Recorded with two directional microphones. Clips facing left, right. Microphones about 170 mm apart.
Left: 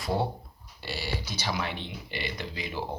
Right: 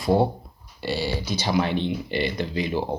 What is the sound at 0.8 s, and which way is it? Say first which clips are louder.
Speech: right 9 dB; 20° right (ahead or behind).